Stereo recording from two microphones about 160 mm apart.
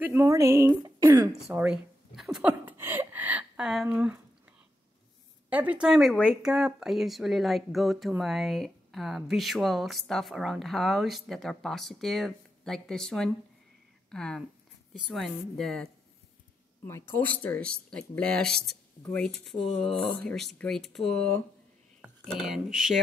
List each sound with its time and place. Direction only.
0.0 s speech: 15° right (ahead or behind)
1.5 s a sound: 10° right (ahead or behind)
5.5 s a woman's voice: 10° right (ahead or behind)
16.8 s a woman's voice: 15° left (ahead or behind); by 22.9 s centre (ahead or behind)